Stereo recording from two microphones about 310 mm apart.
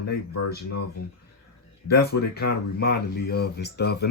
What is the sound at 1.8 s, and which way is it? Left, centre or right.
Speech, left.